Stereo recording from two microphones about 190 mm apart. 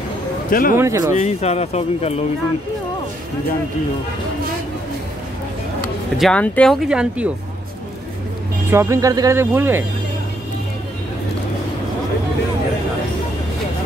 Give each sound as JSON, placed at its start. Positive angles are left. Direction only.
{"t": 0.5, "sound": "speech", "side_deg": 50}
{"t": 0.7, "sound": "speech", "side_deg": -15}
{"t": 1.1, "sound": "speech", "side_deg": 35}
{"t": 6.1, "sound": "speech", "side_deg": 5}
{"t": 8.6, "sound": "speech", "side_deg": -15}